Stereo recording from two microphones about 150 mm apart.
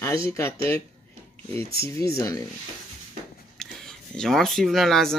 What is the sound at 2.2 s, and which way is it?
Speech, 25° left (ahead or behind).